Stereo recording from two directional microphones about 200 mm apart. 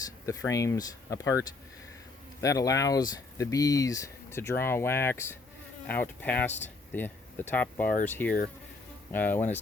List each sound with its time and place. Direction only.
0.3 s speech: 15° left (ahead or behind)